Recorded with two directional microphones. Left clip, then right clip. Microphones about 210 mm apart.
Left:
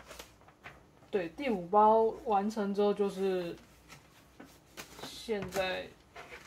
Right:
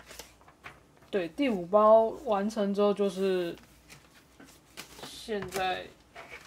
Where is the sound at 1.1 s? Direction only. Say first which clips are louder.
Right 4 dB; 50° right (ahead or behind).